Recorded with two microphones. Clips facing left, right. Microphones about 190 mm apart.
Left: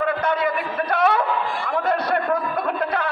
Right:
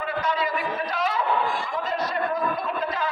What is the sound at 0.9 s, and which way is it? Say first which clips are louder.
Chatter: left 9 dB; 60° left (ahead or behind).